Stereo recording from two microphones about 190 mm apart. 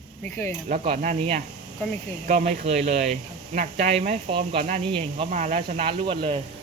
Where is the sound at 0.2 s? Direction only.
10° left (ahead or behind).